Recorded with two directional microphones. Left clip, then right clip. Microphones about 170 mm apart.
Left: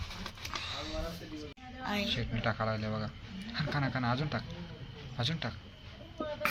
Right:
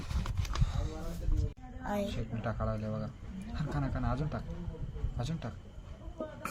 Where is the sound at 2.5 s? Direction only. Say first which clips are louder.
Left 3 dB; 25° left (ahead or behind).